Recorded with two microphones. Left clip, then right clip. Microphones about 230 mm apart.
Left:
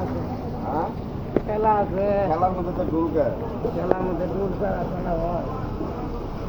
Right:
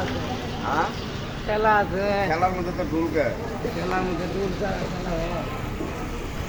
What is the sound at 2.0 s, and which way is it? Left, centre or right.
Speech, right.